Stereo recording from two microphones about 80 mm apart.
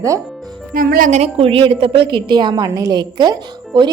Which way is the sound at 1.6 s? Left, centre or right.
Right.